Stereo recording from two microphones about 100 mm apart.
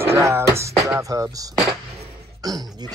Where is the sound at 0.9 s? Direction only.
35° right (ahead or behind).